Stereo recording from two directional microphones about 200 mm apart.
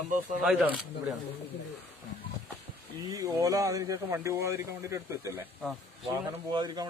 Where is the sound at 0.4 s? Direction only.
5° right (ahead or behind).